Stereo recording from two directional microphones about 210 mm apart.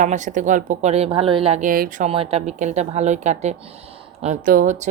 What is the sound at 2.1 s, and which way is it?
A woman's voice, 30° right (ahead or behind).